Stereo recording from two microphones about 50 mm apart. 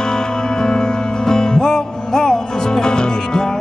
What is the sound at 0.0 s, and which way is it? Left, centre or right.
Music, centre.